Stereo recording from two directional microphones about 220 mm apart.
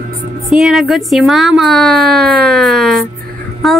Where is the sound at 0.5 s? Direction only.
Centre (ahead or behind).